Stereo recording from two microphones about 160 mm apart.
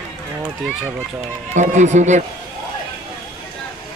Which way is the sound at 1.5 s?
50° right (ahead or behind).